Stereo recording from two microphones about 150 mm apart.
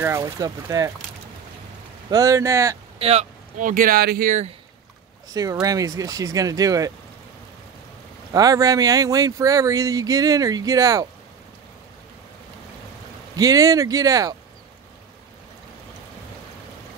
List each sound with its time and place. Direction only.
0.0 s speech: 20° right (ahead or behind)
2.0 s speech: 25° right (ahead or behind)
3.0 s speech: 45° right (ahead or behind); by 4.4 s 80° right
5.3 s speech: 25° right (ahead or behind)
8.3 s speech: 25° right (ahead or behind)
13.4 s speech: 25° right (ahead or behind)